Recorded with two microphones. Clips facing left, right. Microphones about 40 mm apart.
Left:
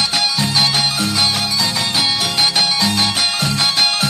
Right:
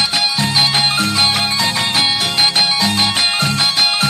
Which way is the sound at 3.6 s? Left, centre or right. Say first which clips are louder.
Left 2 dB; centre.